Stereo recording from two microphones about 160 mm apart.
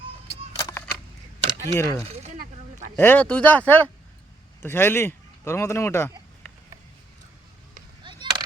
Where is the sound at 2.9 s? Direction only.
15° left (ahead or behind).